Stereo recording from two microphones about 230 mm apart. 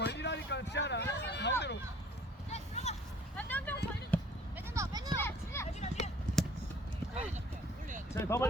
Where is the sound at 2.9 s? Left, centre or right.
Left.